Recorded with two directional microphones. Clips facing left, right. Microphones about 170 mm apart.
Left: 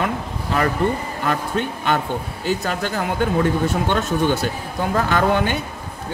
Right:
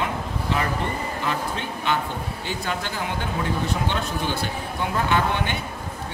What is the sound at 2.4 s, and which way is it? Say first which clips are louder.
A man's voice: left 7 dB; 40° left (ahead or behind).